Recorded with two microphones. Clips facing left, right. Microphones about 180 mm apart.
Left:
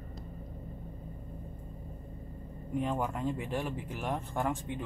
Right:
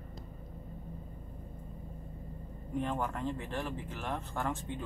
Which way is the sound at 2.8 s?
10° left (ahead or behind).